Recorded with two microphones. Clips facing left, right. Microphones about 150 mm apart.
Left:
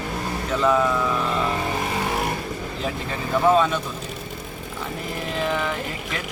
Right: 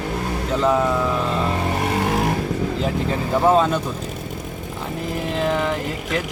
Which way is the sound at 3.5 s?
35° right (ahead or behind).